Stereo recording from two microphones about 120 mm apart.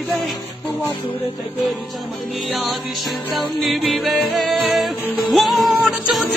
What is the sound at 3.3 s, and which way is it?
Music, centre (ahead or behind).